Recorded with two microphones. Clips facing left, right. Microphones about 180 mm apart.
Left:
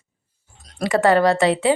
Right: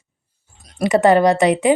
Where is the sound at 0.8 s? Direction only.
20° right (ahead or behind).